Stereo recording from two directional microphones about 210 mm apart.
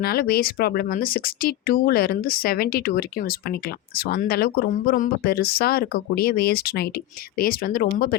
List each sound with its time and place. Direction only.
0.0 s speech: 45° left (ahead or behind)